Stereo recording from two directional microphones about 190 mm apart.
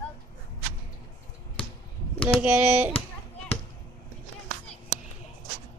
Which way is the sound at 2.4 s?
10° right (ahead or behind).